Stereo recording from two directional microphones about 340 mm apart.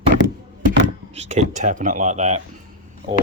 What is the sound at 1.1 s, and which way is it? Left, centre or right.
A man's voice, centre.